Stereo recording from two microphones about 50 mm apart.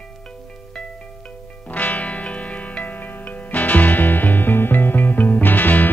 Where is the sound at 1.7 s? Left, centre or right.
Left.